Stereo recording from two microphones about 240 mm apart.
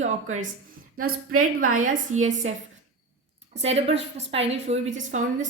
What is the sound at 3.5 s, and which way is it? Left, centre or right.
A woman's voice, right.